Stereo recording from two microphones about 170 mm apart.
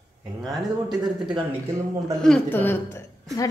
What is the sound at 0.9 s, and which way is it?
Speech, 25° right (ahead or behind).